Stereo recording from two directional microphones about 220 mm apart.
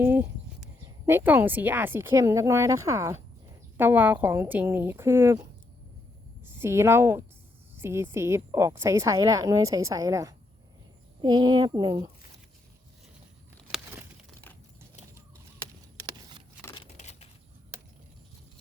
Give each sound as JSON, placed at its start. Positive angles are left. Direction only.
{"t": 0.0, "sound": "a woman's voice", "side_deg": -10}
{"t": 6.5, "sound": "a woman's voice", "side_deg": -10}
{"t": 13.7, "sound": "crumpling", "side_deg": 0}
{"t": 16.8, "sound": "a sound", "side_deg": 30}